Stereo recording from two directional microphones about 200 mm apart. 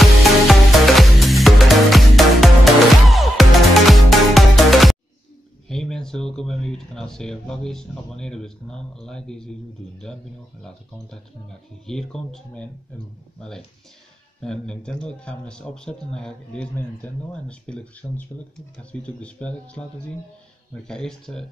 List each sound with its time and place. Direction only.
0.0 s music: centre (ahead or behind)
5.7 s speech: 5° left (ahead or behind)
11.8 s speech: centre (ahead or behind)
14.4 s speech: 5° left (ahead or behind)
20.8 s speech: 5° left (ahead or behind)